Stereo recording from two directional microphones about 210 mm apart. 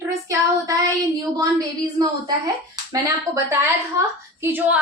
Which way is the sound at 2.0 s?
20° right (ahead or behind).